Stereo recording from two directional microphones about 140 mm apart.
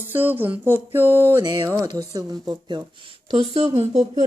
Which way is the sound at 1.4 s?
35° right (ahead or behind).